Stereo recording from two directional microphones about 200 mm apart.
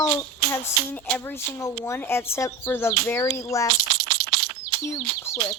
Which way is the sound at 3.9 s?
55° right (ahead or behind).